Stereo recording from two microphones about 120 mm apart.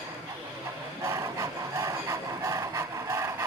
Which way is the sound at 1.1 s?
25° right (ahead or behind).